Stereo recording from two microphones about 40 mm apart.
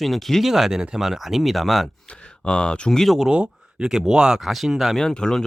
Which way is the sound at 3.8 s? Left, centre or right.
Centre.